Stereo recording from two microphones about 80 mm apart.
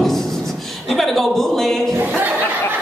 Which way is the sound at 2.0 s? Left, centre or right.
Right.